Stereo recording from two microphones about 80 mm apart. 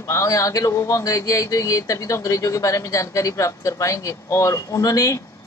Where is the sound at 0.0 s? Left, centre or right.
Left.